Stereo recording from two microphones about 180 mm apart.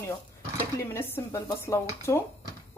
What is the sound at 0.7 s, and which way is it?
Speech, 15° left (ahead or behind).